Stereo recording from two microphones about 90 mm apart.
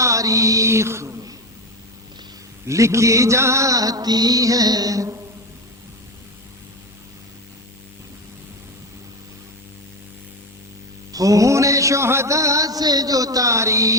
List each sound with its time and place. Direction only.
0.0 s mantra: 35° right (ahead or behind)
2.6 s music: 35° right (ahead or behind)
11.1 s music: 40° right (ahead or behind)